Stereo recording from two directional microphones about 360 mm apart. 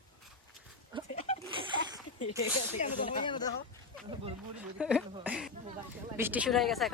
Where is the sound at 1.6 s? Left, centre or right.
Centre.